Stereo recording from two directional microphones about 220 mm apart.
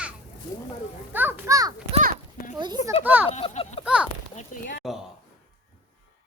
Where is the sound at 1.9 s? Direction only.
35° right (ahead or behind).